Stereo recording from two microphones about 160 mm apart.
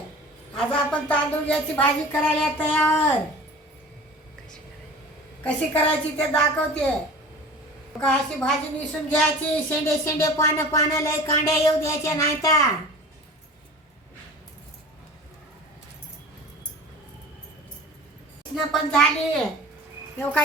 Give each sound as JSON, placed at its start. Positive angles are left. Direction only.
{"t": 0.5, "sound": "a woman's voice", "side_deg": 5}
{"t": 5.4, "sound": "a woman's voice", "side_deg": 10}
{"t": 8.0, "sound": "a woman's voice", "side_deg": 5}
{"t": 9.6, "sound": "speech", "side_deg": 20}
{"t": 18.5, "sound": "a woman's voice", "side_deg": 0}